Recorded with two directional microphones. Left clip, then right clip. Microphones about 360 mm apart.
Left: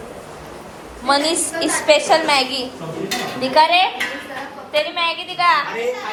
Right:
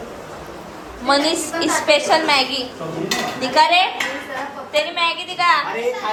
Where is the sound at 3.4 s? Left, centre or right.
Centre.